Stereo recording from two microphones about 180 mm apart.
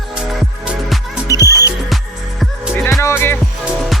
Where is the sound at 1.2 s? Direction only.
20° left (ahead or behind).